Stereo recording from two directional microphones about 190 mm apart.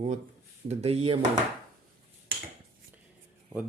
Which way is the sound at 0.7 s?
35° right (ahead or behind).